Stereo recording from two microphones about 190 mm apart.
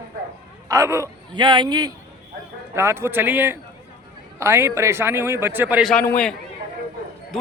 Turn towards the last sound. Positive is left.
turn(degrees=5)  # may be behind; listen again after turning